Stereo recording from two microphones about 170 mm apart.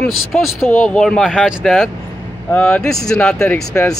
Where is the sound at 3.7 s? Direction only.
15° left (ahead or behind).